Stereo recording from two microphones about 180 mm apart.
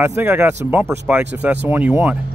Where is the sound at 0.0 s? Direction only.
15° right (ahead or behind).